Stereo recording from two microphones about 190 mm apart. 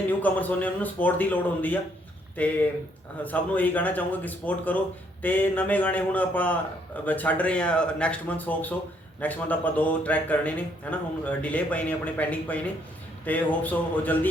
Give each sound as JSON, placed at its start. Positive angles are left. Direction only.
{"t": 0.1, "sound": "a man's voice", "side_deg": 10}